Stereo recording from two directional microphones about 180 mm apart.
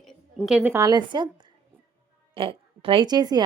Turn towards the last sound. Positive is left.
turn(degrees=-20)  # may be behind; listen again after turning